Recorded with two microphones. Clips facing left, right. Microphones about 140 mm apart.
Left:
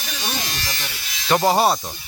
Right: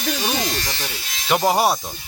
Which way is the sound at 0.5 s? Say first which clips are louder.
Right 4 dB; 25° right (ahead or behind).